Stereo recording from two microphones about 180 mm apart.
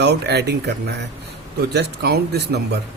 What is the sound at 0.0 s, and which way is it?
Speech, 65° right (ahead or behind).